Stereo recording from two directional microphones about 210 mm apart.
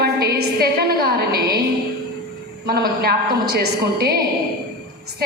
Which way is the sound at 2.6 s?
45° right (ahead or behind).